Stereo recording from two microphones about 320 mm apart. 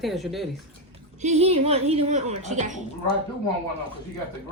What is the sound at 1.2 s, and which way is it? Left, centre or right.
Speech, centre.